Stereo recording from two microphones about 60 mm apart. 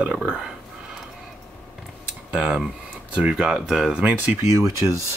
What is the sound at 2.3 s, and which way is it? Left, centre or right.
Speech, centre.